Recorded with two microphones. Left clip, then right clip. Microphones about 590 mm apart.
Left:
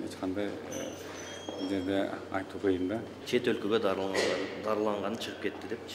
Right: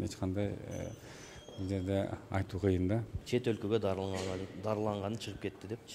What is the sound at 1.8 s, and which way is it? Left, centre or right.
A man's voice, right.